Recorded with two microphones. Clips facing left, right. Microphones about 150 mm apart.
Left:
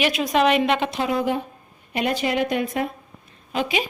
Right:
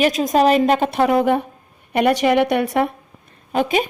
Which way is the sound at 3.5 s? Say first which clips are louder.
Right 6 dB; 50° right (ahead or behind).